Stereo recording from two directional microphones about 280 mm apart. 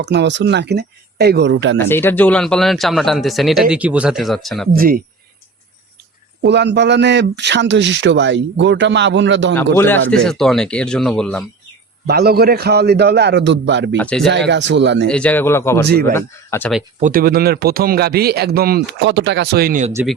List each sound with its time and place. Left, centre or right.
0.0 s a man's voice: right
1.8 s speech: centre
4.7 s a man's voice: right
6.4 s a man's voice: right
9.7 s speech: centre
12.0 s a man's voice: right
13.9 s speech: centre
14.3 s a man's voice: right
15.0 s speech: centre
17.0 s a man's voice: right
19.9 s speech: centre